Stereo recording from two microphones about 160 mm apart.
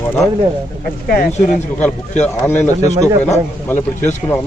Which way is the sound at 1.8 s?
10° left (ahead or behind).